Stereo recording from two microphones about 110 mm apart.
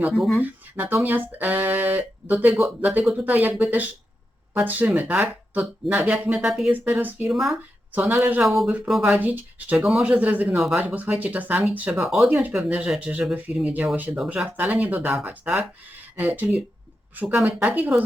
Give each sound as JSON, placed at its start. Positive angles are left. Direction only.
{"t": 0.4, "sound": "speech", "side_deg": -15}
{"t": 4.5, "sound": "speech", "side_deg": -15}
{"t": 6.5, "sound": "speech", "side_deg": 0}
{"t": 6.8, "sound": "speech", "side_deg": -15}
{"t": 7.3, "sound": "speech", "side_deg": 0}
{"t": 7.9, "sound": "speech", "side_deg": -15}
{"t": 8.4, "sound": "speech", "side_deg": 0}